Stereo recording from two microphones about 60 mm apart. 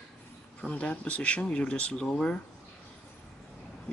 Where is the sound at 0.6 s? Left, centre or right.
Centre.